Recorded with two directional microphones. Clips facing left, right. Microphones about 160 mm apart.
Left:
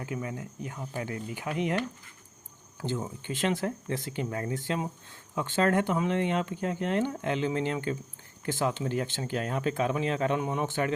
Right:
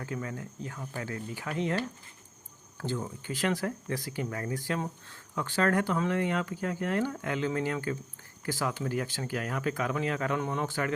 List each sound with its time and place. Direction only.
0.0 s speech: 15° left (ahead or behind)